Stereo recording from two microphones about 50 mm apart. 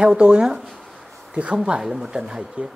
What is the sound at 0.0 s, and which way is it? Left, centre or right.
Speech, centre.